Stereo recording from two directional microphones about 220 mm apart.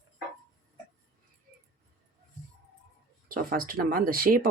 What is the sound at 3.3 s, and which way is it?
Speech, 40° right (ahead or behind).